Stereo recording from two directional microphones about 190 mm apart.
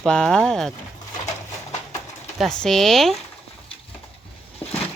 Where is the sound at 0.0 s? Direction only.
5° left (ahead or behind).